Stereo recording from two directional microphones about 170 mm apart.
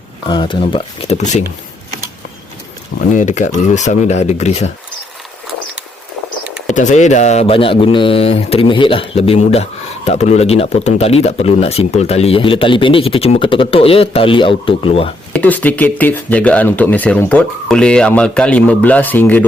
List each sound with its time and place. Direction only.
0.3 s speech: 25° left (ahead or behind); by 1.5 s 40° left (ahead or behind)
3.1 s speech: 45° left (ahead or behind)
6.7 s speech: 45° left (ahead or behind)
15.3 s speech: 10° left (ahead or behind)